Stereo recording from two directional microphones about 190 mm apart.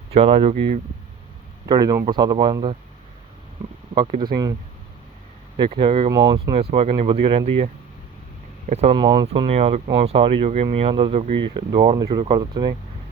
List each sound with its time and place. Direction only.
0.1 s speech: 30° right (ahead or behind)
1.6 s speech: 20° right (ahead or behind)
3.9 s speech: 25° right (ahead or behind)
5.5 s speech: 30° right (ahead or behind)
8.7 s speech: 35° right (ahead or behind)